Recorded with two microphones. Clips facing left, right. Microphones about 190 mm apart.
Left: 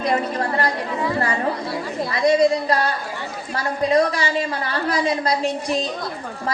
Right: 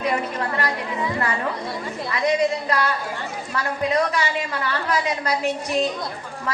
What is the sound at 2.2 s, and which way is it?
A woman's voice, 35° left (ahead or behind).